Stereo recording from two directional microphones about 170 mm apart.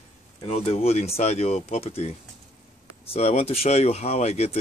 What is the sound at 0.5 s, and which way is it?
Speech, 40° left (ahead or behind).